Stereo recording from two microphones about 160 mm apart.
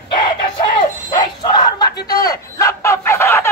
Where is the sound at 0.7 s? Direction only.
30° left (ahead or behind).